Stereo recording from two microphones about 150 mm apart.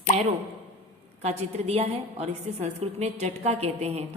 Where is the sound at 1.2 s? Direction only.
45° right (ahead or behind).